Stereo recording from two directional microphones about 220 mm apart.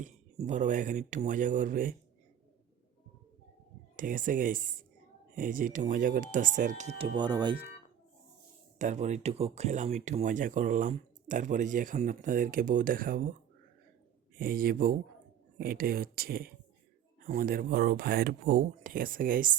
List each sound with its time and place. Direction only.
0.0 s speech: 35° right (ahead or behind)
3.9 s speech: 35° right (ahead or behind)
7.2 s speech: 20° right (ahead or behind)
8.8 s speech: 30° right (ahead or behind)
14.3 s speech: 40° right (ahead or behind)